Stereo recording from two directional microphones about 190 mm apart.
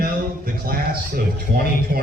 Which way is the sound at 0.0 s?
50° right (ahead or behind).